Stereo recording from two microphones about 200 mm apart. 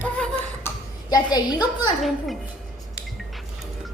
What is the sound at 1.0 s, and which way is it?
Speech, 20° left (ahead or behind).